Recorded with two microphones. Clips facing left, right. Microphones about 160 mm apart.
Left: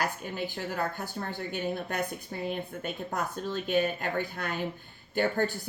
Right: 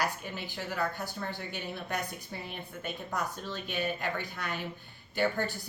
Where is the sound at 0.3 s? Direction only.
45° left (ahead or behind).